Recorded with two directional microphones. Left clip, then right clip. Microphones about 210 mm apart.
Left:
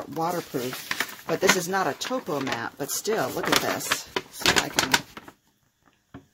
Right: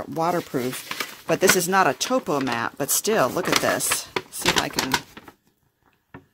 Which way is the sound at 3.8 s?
5° right (ahead or behind).